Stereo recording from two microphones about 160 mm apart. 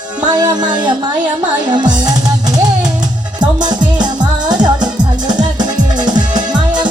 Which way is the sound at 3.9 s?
25° right (ahead or behind).